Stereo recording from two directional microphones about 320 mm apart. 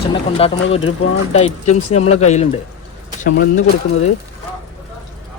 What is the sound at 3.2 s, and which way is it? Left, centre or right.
Speech, left.